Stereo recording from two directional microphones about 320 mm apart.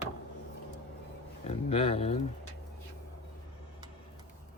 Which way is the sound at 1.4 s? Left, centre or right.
Centre.